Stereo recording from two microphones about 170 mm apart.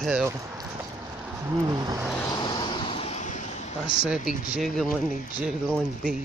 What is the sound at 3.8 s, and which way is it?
Speech, 5° right (ahead or behind).